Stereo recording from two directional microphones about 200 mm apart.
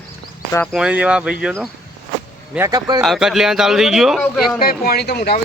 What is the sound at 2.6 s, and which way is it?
Speech, 20° right (ahead or behind).